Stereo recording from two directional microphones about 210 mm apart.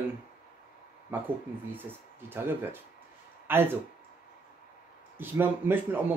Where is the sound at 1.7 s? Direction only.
10° right (ahead or behind).